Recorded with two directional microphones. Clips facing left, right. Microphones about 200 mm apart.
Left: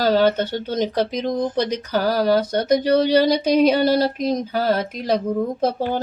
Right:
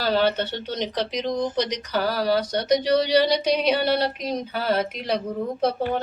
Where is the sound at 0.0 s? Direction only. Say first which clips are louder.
Left 5 dB; 45° left (ahead or behind).